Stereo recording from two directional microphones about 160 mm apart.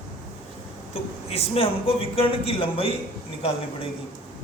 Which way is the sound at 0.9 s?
40° left (ahead or behind).